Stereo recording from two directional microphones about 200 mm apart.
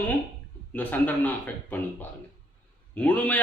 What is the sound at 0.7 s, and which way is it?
A man's voice, 10° left (ahead or behind).